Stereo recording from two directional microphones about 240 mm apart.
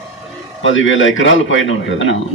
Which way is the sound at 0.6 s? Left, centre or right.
Left.